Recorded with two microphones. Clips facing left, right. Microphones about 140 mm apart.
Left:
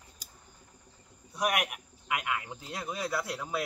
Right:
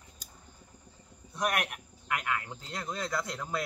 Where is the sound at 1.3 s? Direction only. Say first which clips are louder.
Left 1 dB; 10° left (ahead or behind).